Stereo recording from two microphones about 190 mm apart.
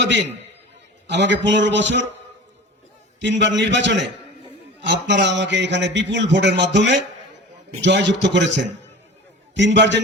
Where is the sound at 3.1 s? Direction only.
70° right (ahead or behind).